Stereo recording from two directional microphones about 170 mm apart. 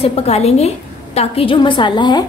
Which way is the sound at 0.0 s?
40° left (ahead or behind).